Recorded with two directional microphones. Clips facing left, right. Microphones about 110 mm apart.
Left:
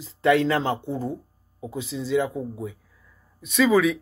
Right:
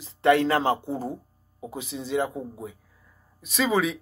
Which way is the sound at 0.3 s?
55° right (ahead or behind).